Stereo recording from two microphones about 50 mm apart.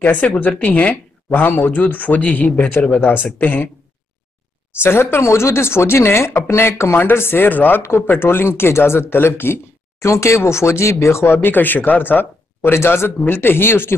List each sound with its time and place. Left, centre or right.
0.0 s speech: left
4.8 s speech: left
8.1 s speech: left
9.9 s speech: left
11.2 s speech: left
12.7 s speech: left
13.2 s speech: left